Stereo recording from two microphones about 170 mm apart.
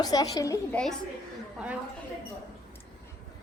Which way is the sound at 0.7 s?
5° left (ahead or behind).